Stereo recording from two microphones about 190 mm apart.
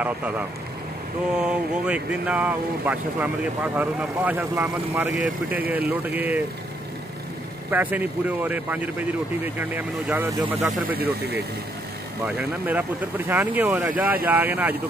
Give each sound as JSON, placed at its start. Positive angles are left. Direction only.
{"t": 0.0, "sound": "speech", "side_deg": -10}
{"t": 7.7, "sound": "speech", "side_deg": -10}
{"t": 11.0, "sound": "speech", "side_deg": -60}
{"t": 12.4, "sound": "speech", "side_deg": -10}